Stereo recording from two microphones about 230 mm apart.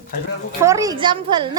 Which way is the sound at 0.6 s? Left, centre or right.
Centre.